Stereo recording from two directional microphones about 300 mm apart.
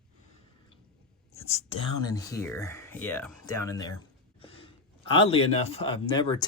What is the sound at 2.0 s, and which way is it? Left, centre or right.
Speech, centre.